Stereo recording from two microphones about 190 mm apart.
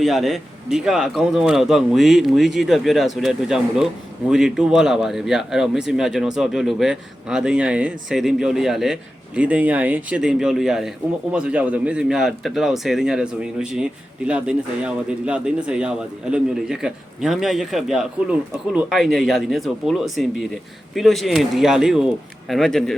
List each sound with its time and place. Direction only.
0.0 s speech: centre (ahead or behind)